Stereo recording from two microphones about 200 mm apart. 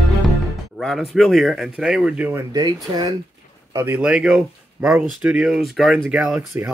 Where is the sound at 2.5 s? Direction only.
20° right (ahead or behind).